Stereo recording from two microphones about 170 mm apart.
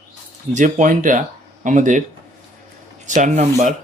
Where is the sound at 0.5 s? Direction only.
50° right (ahead or behind).